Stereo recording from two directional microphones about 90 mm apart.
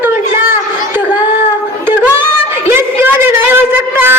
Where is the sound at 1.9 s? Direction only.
20° right (ahead or behind).